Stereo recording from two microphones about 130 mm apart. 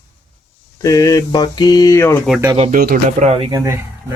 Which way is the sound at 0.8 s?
25° left (ahead or behind).